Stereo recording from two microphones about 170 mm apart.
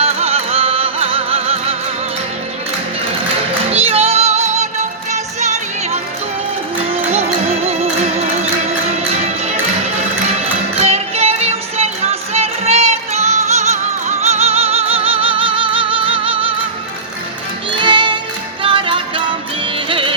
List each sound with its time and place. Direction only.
0.0 s music: 35° right (ahead or behind)
3.7 s music: 35° right (ahead or behind)
10.8 s music: 35° right (ahead or behind)
17.7 s music: 30° right (ahead or behind)